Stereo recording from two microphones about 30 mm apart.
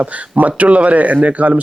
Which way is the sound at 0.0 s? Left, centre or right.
Right.